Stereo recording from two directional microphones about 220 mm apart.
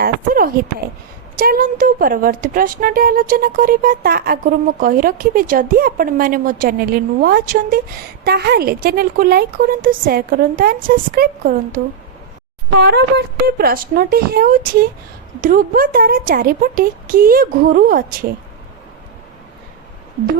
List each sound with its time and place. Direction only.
0.0 s a woman's voice: 40° right (ahead or behind)
12.8 s a woman's voice: 50° right (ahead or behind)